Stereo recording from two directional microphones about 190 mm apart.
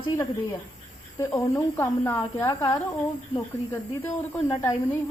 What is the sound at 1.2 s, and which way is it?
A woman's voice, 10° left (ahead or behind).